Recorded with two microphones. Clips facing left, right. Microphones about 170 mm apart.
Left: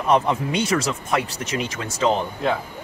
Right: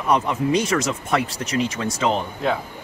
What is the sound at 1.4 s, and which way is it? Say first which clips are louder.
Speech: right 4 dB; 35° right (ahead or behind).